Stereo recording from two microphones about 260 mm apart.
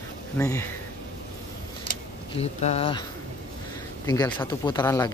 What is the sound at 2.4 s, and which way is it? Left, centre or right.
Speech, left.